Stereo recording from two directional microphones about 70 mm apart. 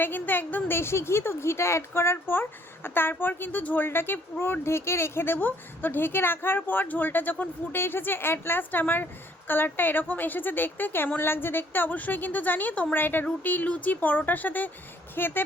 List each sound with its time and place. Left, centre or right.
0.0 s a woman's voice: left